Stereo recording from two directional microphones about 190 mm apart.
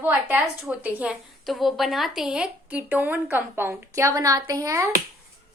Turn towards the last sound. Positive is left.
turn(degrees=-15)  # may be behind; listen again after turning